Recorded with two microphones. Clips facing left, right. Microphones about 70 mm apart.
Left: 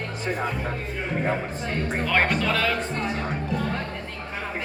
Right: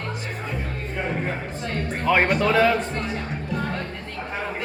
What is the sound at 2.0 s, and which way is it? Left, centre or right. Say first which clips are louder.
Speech: right 5 dB; centre.